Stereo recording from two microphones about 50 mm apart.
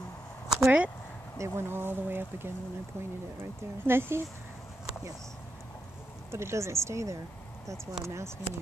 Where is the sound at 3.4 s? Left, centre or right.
Right.